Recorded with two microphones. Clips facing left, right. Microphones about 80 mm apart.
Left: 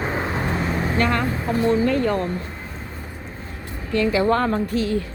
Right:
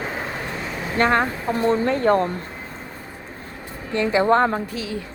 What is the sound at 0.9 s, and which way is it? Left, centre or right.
Speech, right.